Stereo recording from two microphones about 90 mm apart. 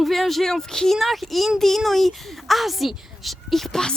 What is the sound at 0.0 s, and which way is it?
Speech, centre (ahead or behind).